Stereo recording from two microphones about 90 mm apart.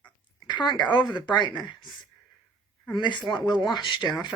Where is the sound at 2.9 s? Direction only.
60° left (ahead or behind).